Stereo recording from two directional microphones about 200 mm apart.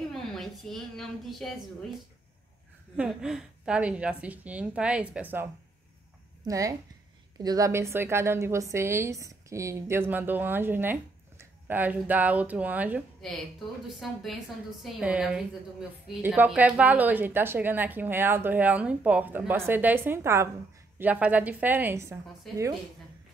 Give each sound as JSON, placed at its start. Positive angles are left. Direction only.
{"t": 0.1, "sound": "a woman's voice", "side_deg": 0}
{"t": 3.0, "sound": "a woman's voice", "side_deg": -5}